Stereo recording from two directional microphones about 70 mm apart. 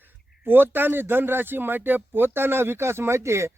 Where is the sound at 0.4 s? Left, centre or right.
Right.